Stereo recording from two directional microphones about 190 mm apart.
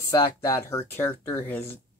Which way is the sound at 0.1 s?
15° left (ahead or behind).